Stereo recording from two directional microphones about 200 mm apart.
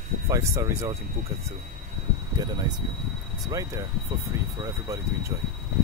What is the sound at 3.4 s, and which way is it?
Speech, 15° right (ahead or behind).